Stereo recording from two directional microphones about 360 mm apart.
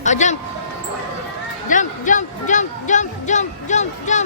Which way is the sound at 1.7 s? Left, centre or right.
Left.